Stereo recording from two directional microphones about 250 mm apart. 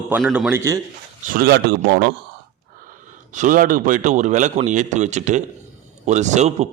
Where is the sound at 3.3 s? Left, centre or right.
Right.